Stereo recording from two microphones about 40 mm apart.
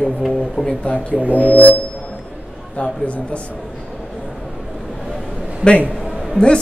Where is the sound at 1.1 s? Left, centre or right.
Right.